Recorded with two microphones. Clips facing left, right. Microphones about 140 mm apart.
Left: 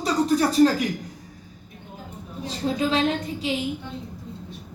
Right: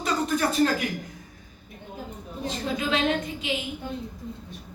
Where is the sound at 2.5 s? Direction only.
35° left (ahead or behind).